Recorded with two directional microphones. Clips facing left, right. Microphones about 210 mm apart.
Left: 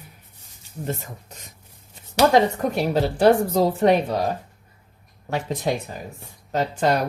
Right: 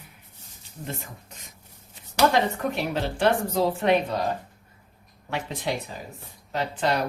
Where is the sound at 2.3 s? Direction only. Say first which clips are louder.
Left 6 dB; 40° left (ahead or behind).